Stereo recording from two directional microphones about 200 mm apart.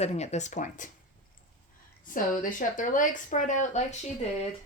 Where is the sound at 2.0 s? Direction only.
45° left (ahead or behind).